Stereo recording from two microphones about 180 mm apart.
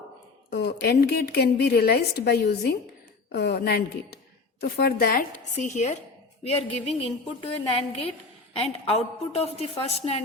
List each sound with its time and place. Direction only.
0.5 s a woman's voice: 65° left (ahead or behind); by 10.2 s 35° left (ahead or behind)